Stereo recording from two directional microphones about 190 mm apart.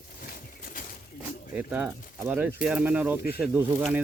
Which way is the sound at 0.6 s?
50° left (ahead or behind).